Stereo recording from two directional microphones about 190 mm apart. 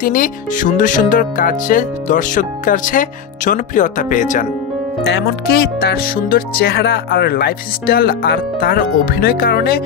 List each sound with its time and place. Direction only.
0.0 s speech: 45° left (ahead or behind)
5.0 s speech: 60° left (ahead or behind)